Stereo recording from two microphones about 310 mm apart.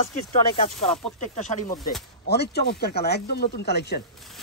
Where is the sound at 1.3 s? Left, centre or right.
Left.